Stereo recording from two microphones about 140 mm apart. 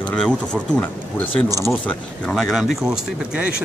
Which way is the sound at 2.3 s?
Centre (ahead or behind).